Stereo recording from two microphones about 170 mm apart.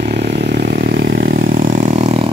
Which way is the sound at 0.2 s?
75° right (ahead or behind).